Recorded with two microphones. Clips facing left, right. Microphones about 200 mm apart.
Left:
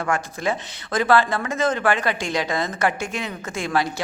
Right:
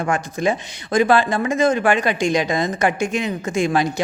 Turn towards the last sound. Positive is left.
turn(degrees=-15)  # may be behind; listen again after turning